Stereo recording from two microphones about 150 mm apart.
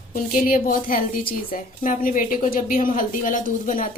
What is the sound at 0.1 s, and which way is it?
A woman's voice, 70° left (ahead or behind).